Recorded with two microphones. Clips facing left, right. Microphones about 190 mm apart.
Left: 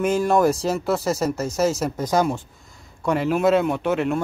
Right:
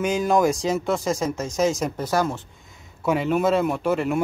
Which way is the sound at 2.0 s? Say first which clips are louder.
Left 3 dB; 15° left (ahead or behind).